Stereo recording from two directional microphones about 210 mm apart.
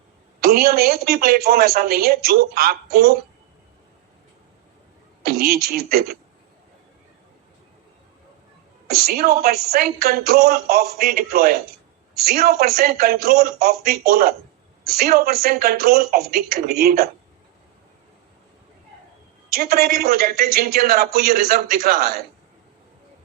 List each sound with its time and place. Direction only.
0.4 s a woman's voice: 45° right (ahead or behind)
5.2 s a sound: 45° right (ahead or behind)
5.6 s a woman's voice: 45° right (ahead or behind)
8.9 s a woman's voice: 45° right (ahead or behind)
19.5 s a woman's voice: 45° right (ahead or behind)